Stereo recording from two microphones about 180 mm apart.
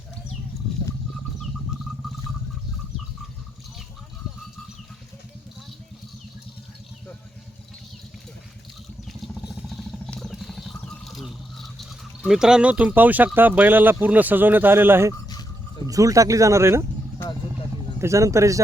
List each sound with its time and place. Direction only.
9.0 s a sound: centre (ahead or behind)
15.9 s speech: 20° right (ahead or behind)
18.0 s speech: 15° right (ahead or behind)